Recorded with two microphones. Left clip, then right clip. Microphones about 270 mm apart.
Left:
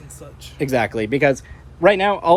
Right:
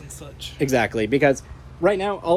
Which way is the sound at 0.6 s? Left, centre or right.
Left.